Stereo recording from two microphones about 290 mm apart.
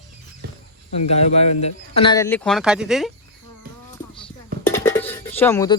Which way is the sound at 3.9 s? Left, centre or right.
Centre.